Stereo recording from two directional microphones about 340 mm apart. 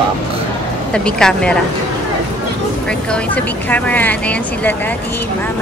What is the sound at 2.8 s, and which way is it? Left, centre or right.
Speech, centre.